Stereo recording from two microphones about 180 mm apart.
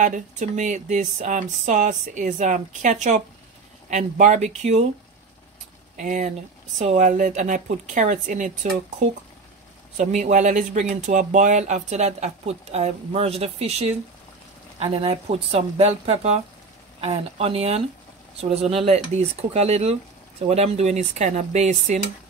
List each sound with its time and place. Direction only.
0.0 s speech: 45° right (ahead or behind)
5.9 s speech: 45° right (ahead or behind)
9.9 s speech: 45° right (ahead or behind)